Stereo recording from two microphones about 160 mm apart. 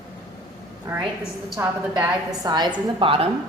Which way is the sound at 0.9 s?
15° right (ahead or behind).